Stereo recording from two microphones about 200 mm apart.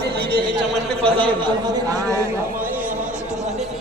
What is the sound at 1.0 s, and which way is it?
Speech, 25° right (ahead or behind).